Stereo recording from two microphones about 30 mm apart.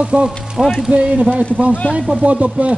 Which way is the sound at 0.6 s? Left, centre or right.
Right.